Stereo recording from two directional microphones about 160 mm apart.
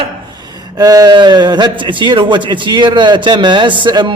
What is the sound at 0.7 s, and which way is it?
A man's voice, 25° right (ahead or behind).